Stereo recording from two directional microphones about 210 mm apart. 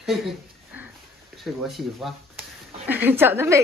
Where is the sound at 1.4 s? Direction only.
Centre (ahead or behind).